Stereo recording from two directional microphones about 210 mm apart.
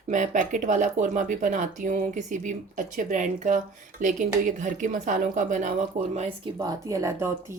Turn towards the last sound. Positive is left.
turn(degrees=-15)  # may be behind; listen again after turning